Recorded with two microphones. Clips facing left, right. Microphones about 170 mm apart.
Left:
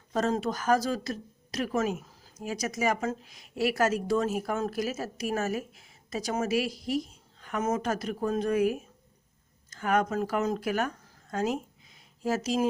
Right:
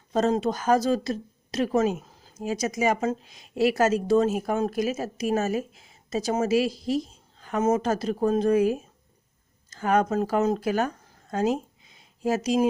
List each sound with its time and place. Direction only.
0.1 s speech: 25° right (ahead or behind)